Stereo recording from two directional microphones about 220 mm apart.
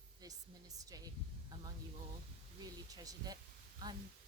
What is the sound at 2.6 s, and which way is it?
Speech, 15° right (ahead or behind).